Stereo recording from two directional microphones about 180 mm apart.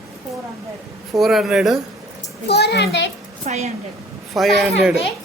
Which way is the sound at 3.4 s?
40° right (ahead or behind).